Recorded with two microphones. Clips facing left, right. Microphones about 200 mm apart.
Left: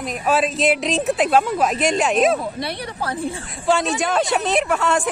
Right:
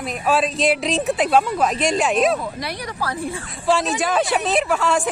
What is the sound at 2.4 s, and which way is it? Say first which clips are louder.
Speech: left 2 dB; 25° left (ahead or behind).